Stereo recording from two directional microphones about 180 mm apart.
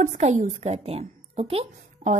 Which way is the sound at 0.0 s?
45° right (ahead or behind).